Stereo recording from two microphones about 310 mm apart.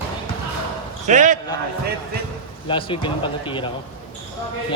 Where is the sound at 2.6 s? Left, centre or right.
Centre.